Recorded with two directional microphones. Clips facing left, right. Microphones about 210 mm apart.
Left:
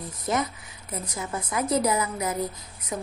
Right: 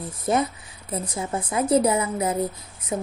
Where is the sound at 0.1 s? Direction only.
30° right (ahead or behind).